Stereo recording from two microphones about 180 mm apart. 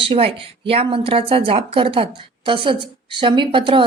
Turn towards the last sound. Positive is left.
turn(degrees=-30)  # may be behind; listen again after turning